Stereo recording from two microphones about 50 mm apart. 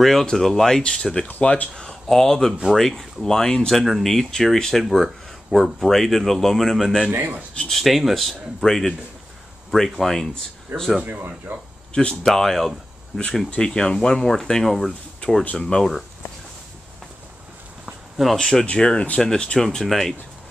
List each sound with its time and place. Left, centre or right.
0.0 s speech: centre
1.8 s speech: centre
4.8 s speech: centre
7.1 s speech: right
7.7 s speech: centre
10.7 s speech: right
11.1 s speech: right
11.9 s speech: centre
12.3 s speech: centre
15.5 s speech: centre
18.1 s speech: centre